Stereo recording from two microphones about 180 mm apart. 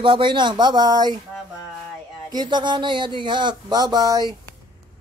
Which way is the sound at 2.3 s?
25° right (ahead or behind).